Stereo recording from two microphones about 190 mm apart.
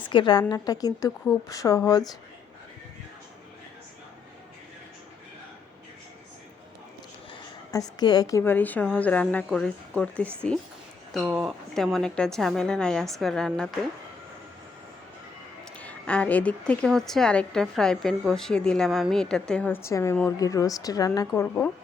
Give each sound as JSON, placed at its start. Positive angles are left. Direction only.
{"t": 0.1, "sound": "a woman's voice", "side_deg": 25}
{"t": 7.7, "sound": "a woman's voice", "side_deg": 20}
{"t": 15.8, "sound": "a woman's voice", "side_deg": 5}